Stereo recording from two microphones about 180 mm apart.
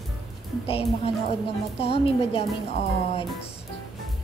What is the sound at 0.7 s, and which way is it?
A woman's voice, 30° left (ahead or behind).